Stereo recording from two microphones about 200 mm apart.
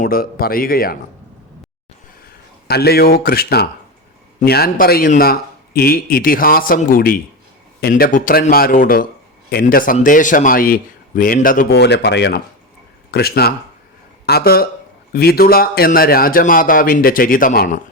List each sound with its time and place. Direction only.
0.0 s speech: 45° left (ahead or behind)
2.6 s speech: 50° left (ahead or behind)